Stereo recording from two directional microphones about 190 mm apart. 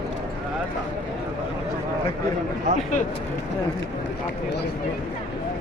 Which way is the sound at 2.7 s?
45° right (ahead or behind).